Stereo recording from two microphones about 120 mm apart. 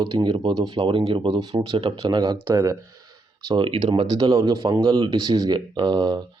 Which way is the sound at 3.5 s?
40° right (ahead or behind).